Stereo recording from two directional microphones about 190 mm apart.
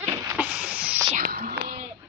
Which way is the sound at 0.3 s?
10° right (ahead or behind).